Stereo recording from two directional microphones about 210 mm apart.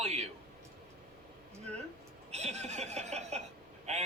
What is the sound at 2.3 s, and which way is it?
A man's voice, 30° right (ahead or behind).